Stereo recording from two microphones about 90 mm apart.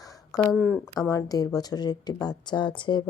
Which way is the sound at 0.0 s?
40° left (ahead or behind).